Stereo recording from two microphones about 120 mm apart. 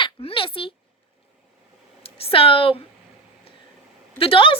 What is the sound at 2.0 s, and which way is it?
Speech, 50° left (ahead or behind).